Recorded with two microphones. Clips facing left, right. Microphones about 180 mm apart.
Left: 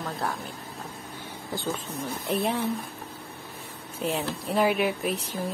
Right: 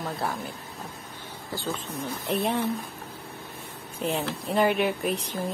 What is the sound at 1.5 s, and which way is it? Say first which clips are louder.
Speech: left 1 dB; 20° left (ahead or behind).